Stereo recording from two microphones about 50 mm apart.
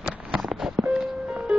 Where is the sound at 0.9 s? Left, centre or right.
Centre.